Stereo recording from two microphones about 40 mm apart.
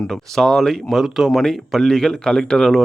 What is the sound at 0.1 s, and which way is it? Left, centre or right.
Speech, centre.